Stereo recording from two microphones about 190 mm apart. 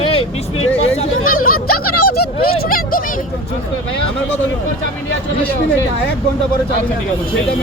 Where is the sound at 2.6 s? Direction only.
50° left (ahead or behind).